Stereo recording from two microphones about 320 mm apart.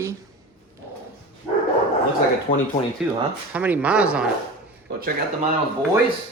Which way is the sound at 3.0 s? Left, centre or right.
Centre.